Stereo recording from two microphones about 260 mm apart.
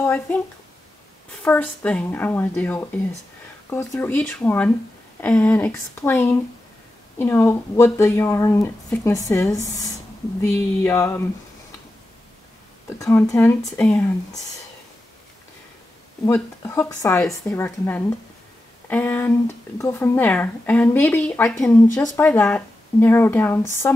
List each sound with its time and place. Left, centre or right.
0.0 s speech: centre
1.4 s speech: centre
10.8 s speech: centre
13.0 s speech: centre
16.3 s speech: centre